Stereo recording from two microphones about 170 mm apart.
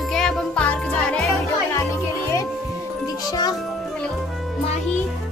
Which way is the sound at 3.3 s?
25° left (ahead or behind).